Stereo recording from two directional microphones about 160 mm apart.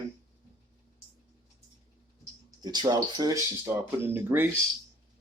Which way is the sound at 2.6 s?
25° right (ahead or behind).